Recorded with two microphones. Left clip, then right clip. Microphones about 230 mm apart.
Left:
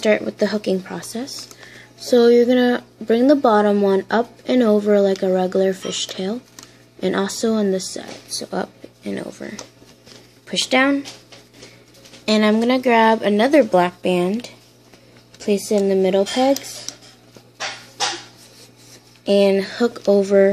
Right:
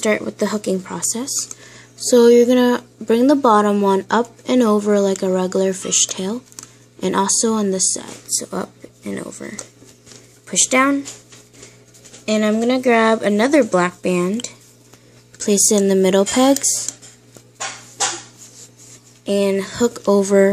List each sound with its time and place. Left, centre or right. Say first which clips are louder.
0.0 s speech: left 1 dB; centre
12.3 s speech: left 1 dB; centre; by 16.5 s right
19.2 s speech: left 3 dB; centre